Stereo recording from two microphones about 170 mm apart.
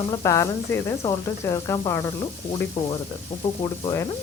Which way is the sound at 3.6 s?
20° left (ahead or behind).